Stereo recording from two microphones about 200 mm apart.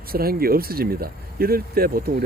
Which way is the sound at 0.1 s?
50° right (ahead or behind).